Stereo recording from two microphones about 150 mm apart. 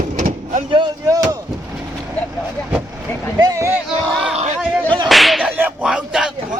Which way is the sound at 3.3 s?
20° right (ahead or behind).